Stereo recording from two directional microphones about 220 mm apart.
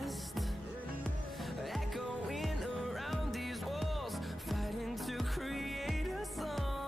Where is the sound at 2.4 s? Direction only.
Centre (ahead or behind).